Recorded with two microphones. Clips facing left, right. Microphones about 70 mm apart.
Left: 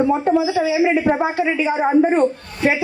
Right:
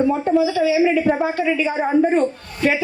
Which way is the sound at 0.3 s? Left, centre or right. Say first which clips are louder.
Right 1 dB; left.